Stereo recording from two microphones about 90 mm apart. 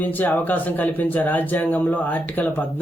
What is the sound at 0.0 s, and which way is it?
Speech, 20° left (ahead or behind).